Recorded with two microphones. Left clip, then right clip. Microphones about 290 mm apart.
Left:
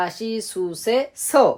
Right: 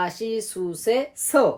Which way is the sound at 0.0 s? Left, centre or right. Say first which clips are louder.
Left 1 dB; left.